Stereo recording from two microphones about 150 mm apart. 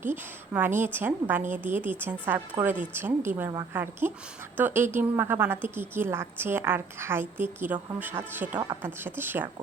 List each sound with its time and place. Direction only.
0.0 s a woman's voice: 15° right (ahead or behind)